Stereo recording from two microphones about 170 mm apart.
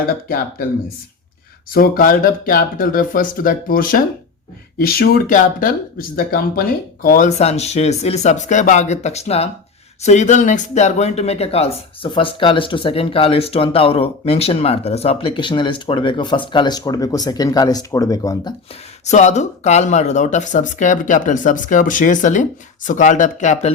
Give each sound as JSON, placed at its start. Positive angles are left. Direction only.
{"t": 1.7, "sound": "speech", "side_deg": 55}
{"t": 19.0, "sound": "speech", "side_deg": 40}